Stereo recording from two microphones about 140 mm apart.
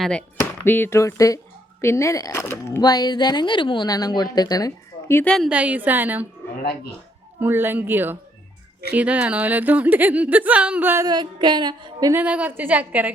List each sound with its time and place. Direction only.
0.0 s a woman's voice: 10° left (ahead or behind)
2.8 s a woman's voice: 30° left (ahead or behind)
5.5 s speech: 10° right (ahead or behind)
7.3 s speech: 15° right (ahead or behind)
11.0 s a sound: 30° right (ahead or behind)
12.1 s speech: 10° right (ahead or behind)